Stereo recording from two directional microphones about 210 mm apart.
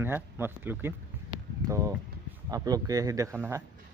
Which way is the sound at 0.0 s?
10° right (ahead or behind).